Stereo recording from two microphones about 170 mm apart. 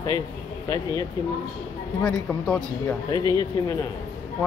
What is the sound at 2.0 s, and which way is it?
Speech, 5° left (ahead or behind).